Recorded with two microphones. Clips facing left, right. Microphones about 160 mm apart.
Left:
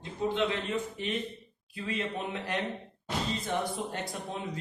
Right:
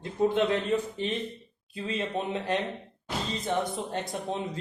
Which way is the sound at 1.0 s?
30° right (ahead or behind).